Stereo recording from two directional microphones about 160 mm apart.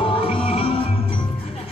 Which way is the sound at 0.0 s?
35° left (ahead or behind).